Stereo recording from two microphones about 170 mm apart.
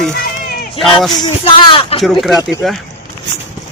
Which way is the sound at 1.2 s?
30° left (ahead or behind).